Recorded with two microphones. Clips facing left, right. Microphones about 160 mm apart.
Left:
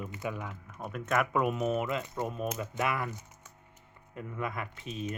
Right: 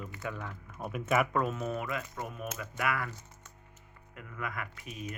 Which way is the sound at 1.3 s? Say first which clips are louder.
Left 3 dB; 15° left (ahead or behind).